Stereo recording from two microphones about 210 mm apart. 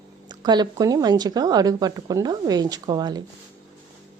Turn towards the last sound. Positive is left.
turn(degrees=-20)  # may be behind; listen again after turning